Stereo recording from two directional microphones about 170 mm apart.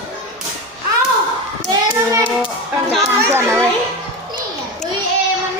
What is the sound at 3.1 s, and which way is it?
Speech, 15° right (ahead or behind).